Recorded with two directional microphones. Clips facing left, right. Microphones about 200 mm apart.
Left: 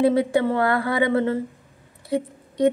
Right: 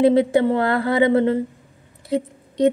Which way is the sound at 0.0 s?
20° right (ahead or behind).